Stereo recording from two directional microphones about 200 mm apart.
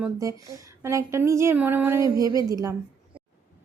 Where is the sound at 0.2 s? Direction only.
15° right (ahead or behind).